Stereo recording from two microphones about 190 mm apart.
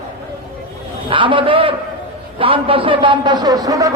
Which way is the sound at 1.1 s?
25° right (ahead or behind).